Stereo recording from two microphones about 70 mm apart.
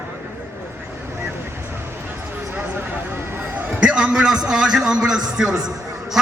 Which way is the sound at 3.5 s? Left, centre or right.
Centre.